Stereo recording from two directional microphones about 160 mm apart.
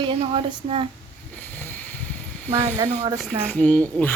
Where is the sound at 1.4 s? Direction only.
10° left (ahead or behind).